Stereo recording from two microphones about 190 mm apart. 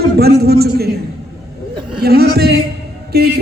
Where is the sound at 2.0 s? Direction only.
55° right (ahead or behind).